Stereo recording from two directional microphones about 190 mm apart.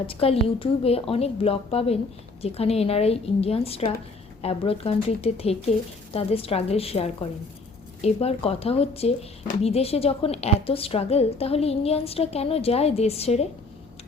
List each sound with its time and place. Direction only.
0.1 s a woman's voice: 30° left (ahead or behind)